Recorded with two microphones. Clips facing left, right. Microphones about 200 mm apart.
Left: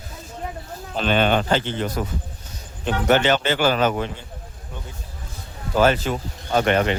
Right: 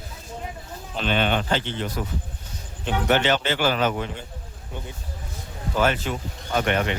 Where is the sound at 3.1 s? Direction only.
45° left (ahead or behind).